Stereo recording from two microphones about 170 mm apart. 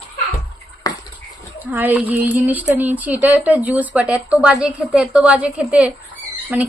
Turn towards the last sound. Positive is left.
turn(degrees=-10)  # may be behind; listen again after turning